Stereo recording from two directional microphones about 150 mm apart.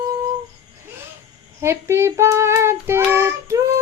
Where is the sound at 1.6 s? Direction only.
20° right (ahead or behind).